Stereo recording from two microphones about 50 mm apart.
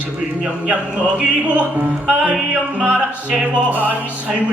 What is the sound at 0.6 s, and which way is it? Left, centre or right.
Speech, right.